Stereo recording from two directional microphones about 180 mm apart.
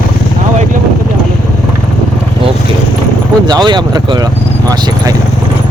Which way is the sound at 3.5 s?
25° right (ahead or behind).